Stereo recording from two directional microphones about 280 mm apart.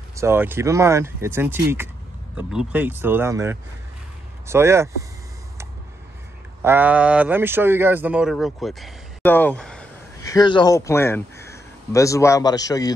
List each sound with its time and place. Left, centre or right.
0.1 s speech: centre
6.6 s speech: centre